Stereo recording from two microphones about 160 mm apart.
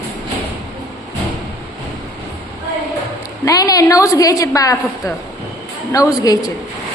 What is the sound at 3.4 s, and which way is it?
A woman's voice, 25° left (ahead or behind).